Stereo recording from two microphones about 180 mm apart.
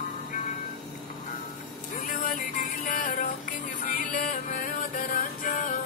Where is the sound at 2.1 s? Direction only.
50° left (ahead or behind).